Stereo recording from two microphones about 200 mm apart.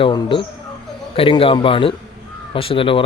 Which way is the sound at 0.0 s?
25° left (ahead or behind).